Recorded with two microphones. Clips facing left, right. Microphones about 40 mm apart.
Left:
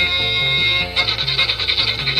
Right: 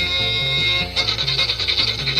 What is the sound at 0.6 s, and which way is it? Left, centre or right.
Music, centre.